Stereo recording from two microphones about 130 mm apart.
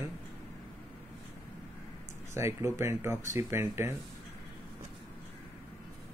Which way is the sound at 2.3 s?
20° right (ahead or behind).